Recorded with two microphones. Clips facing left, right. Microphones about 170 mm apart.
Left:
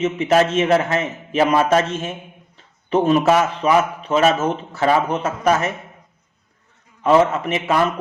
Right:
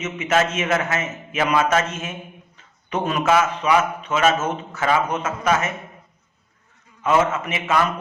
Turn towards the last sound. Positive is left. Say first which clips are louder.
# left 3 dB
turn(degrees=35)  # may be behind; listen again after turning